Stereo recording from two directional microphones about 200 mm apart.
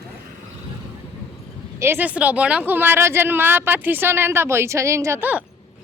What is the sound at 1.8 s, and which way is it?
Speech, 10° right (ahead or behind).